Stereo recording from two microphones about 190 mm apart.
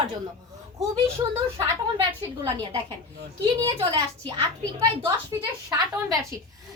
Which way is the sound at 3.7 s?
30° right (ahead or behind).